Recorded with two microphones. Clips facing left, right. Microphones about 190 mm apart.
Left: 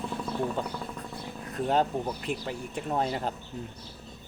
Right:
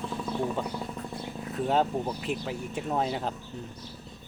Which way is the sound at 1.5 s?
Centre (ahead or behind).